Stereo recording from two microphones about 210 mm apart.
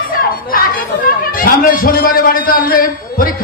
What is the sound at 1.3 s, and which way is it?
A man's voice, 45° left (ahead or behind).